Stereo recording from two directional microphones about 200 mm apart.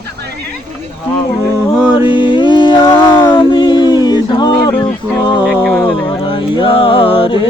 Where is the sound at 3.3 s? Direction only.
25° left (ahead or behind).